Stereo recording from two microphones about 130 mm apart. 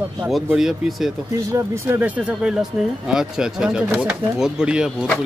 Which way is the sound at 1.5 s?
15° right (ahead or behind).